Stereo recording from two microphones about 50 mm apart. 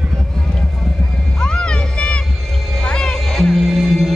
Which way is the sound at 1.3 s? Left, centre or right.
Centre.